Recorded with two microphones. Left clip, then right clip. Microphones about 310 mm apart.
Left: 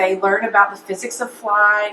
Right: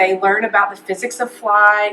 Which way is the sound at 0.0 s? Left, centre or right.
Centre.